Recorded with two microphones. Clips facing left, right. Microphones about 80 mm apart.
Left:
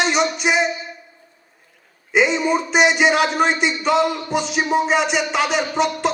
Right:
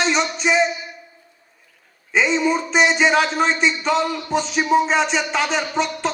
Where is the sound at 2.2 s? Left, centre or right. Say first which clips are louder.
Even; left.